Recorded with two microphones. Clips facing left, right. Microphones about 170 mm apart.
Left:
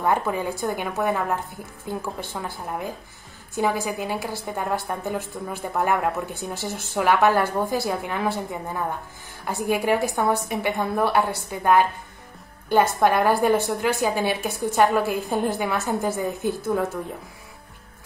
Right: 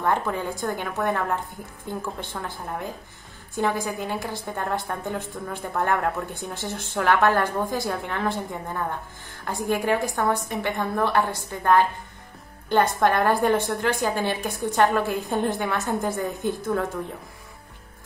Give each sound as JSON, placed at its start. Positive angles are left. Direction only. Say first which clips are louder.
{"t": 0.0, "sound": "a woman's voice", "louder": "left 2 dB", "side_deg": 10}